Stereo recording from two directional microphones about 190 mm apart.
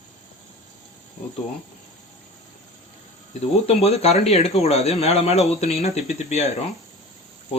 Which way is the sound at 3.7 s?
35° left (ahead or behind).